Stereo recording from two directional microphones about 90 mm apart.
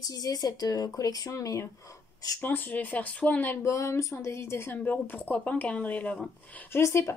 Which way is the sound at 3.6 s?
35° left (ahead or behind).